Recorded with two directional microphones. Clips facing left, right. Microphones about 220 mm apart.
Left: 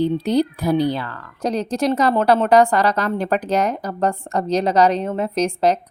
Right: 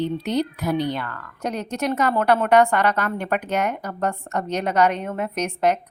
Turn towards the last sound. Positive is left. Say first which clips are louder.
# left 4 dB
turn(degrees=30)  # may be behind; listen again after turning